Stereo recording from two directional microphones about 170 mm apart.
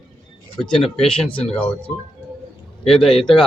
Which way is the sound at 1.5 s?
10° left (ahead or behind).